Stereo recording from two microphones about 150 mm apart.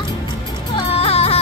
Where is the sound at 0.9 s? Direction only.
40° left (ahead or behind).